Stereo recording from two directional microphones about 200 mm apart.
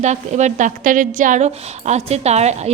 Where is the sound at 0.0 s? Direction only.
35° right (ahead or behind).